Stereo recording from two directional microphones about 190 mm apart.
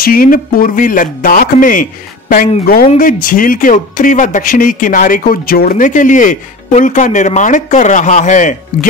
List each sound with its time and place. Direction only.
0.0 s speech: 50° left (ahead or behind)